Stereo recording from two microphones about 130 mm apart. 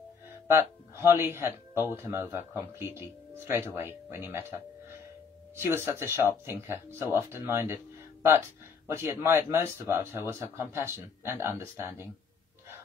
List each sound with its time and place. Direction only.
0.5 s speech: 20° right (ahead or behind)
5.6 s speech: 20° right (ahead or behind)
8.8 s speech: 20° right (ahead or behind)